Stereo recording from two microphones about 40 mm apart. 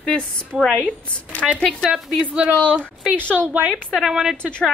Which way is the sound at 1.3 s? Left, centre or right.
Left.